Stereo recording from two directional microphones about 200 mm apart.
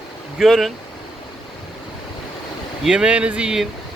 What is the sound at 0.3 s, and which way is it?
Speech, centre (ahead or behind).